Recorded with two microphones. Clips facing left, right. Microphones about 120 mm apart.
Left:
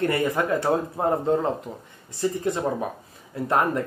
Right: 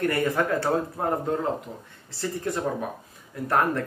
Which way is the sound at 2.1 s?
20° left (ahead or behind).